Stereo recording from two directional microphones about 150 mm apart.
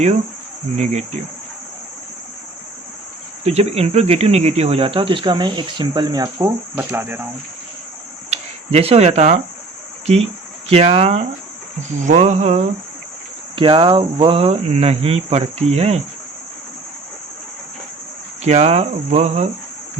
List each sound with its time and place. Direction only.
0.8 s speech: 50° right (ahead or behind)
3.4 s speech: 45° right (ahead or behind); by 7.3 s 15° right (ahead or behind)
8.3 s speech: 40° right (ahead or behind)
10.7 s speech: 45° right (ahead or behind)
13.6 s speech: 35° right (ahead or behind)
18.4 s speech: 50° right (ahead or behind)